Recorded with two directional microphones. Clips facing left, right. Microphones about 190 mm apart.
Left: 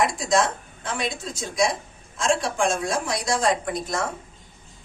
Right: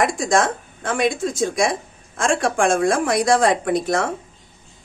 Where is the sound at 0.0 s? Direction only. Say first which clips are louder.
Right 3 dB; 50° right (ahead or behind); by 4.1 s 65° right (ahead or behind).